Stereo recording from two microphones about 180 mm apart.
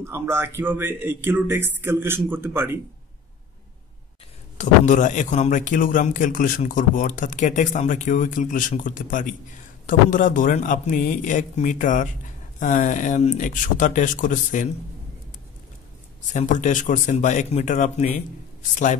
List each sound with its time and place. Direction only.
0.0 s a man's voice: 15° right (ahead or behind)
4.6 s a man's voice: 45° left (ahead or behind)
16.3 s a man's voice: 45° left (ahead or behind)